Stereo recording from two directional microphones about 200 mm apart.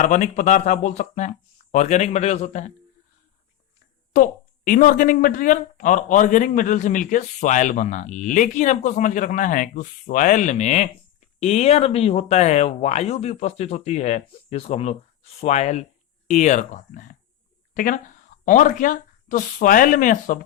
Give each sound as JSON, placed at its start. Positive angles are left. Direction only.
{"t": 0.0, "sound": "speech", "side_deg": 40}
{"t": 4.1, "sound": "speech", "side_deg": 45}